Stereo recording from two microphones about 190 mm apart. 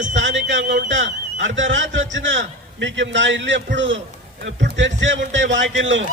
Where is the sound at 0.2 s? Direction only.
70° right (ahead or behind).